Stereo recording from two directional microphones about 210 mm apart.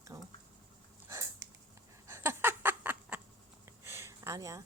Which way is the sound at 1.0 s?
10° right (ahead or behind).